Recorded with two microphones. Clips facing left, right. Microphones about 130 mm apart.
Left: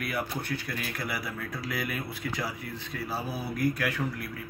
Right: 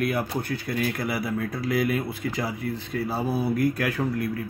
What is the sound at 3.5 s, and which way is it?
Speech, 50° right (ahead or behind).